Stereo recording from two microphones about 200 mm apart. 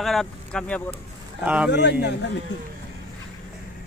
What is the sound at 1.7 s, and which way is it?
Speech, 60° left (ahead or behind).